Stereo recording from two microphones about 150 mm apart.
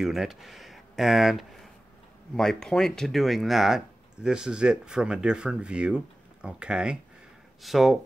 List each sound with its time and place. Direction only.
0.0 s speech: centre (ahead or behind)